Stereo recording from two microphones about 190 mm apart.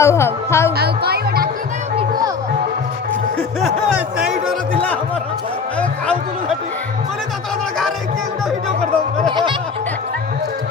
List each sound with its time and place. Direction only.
0.0 s speech: 15° left (ahead or behind)
0.8 s speech: 55° right (ahead or behind)
3.6 s speech: 5° right (ahead or behind)
5.8 s speech: 5° left (ahead or behind)